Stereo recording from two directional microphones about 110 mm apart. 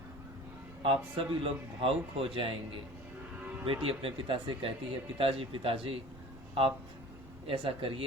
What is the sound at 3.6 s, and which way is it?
Speech, 55° right (ahead or behind).